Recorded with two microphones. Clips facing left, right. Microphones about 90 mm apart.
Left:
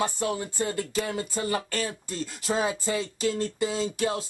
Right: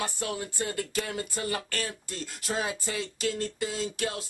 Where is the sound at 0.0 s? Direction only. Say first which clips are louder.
Left 5 dB; centre (ahead or behind).